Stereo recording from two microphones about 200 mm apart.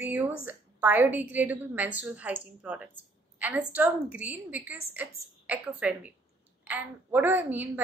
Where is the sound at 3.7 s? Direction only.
10° right (ahead or behind).